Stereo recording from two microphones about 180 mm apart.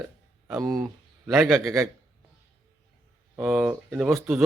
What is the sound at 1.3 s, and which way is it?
Speech, 5° right (ahead or behind).